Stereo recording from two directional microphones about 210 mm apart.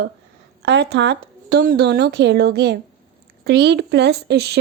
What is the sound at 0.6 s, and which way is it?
Speech, 55° right (ahead or behind).